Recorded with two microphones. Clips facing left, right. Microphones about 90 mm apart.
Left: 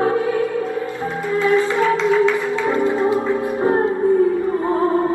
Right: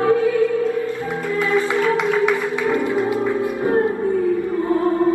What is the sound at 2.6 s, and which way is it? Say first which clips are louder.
Music: left 4 dB; 25° left (ahead or behind).